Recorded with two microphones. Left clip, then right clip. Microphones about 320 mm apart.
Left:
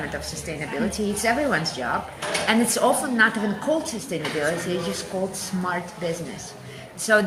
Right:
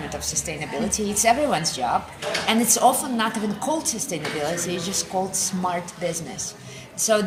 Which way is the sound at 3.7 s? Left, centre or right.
Right.